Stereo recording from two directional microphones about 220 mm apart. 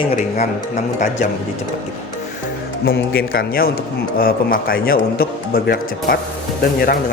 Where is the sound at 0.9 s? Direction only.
35° left (ahead or behind).